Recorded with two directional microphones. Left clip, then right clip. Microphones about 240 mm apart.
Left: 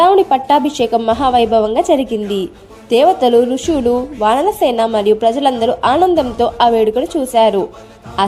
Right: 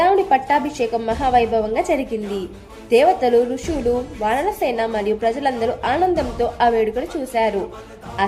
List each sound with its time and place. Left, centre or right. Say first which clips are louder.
0.0 s a woman's voice: left 5 dB; left